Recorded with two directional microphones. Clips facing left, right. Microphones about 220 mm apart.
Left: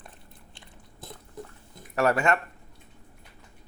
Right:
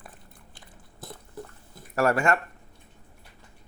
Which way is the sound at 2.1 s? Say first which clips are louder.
Even; 25° left (ahead or behind).